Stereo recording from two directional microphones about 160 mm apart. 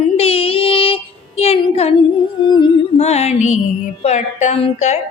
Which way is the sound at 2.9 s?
40° left (ahead or behind).